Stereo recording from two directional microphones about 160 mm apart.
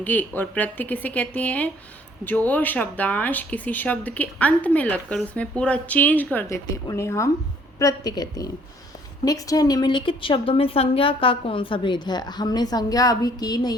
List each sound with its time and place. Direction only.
0.0 s a woman's voice: 10° left (ahead or behind)